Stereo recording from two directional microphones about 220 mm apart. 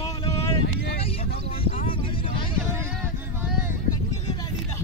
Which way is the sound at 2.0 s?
25° left (ahead or behind).